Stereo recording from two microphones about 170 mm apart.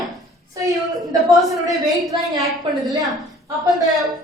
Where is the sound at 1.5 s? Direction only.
20° right (ahead or behind).